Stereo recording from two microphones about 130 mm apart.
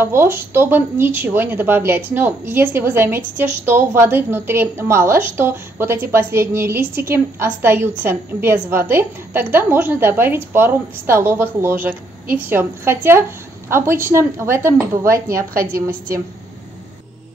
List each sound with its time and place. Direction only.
0.0 s speech: 20° right (ahead or behind)
15.5 s a woman's voice: 90° right